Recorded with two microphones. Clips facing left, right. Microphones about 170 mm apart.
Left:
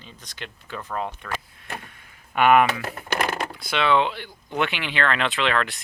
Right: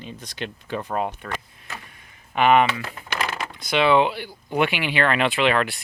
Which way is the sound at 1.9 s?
Centre (ahead or behind).